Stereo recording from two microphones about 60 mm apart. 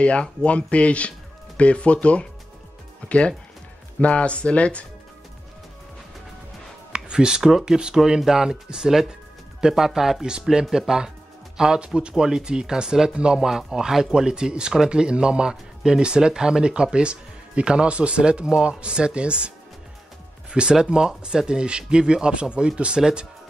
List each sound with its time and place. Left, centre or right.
0.0 s speech: centre
6.9 s speech: centre
20.5 s speech: centre